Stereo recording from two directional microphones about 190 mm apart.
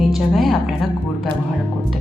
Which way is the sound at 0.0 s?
Centre (ahead or behind).